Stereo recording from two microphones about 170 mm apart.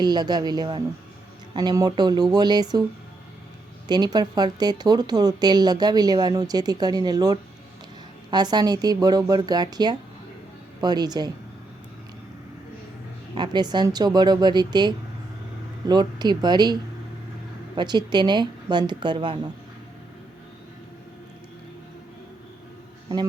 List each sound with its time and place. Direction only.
0.0 s speech: 25° right (ahead or behind)
3.8 s speech: 25° right (ahead or behind)
13.3 s speech: 25° right (ahead or behind)
17.7 s speech: 25° right (ahead or behind)